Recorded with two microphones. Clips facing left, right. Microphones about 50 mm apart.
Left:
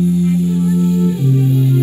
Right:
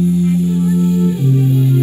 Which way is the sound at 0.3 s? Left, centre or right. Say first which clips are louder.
Even; right.